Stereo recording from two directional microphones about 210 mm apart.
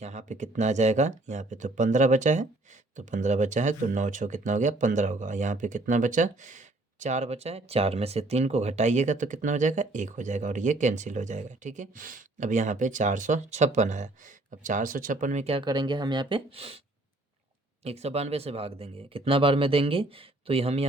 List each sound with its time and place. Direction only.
0.0 s speech: 35° right (ahead or behind)
17.8 s speech: 30° right (ahead or behind)